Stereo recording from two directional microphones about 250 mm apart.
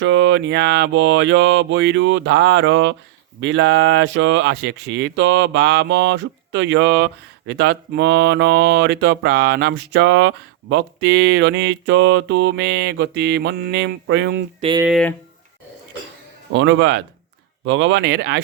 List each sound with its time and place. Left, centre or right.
0.0 s speech: right
14.6 s speech: centre
14.8 s speech: centre
16.5 s speech: right